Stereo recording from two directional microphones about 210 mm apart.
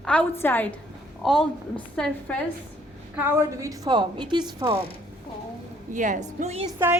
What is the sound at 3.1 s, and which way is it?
A woman's voice, 10° right (ahead or behind).